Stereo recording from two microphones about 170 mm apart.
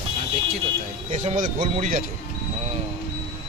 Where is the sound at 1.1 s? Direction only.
45° right (ahead or behind).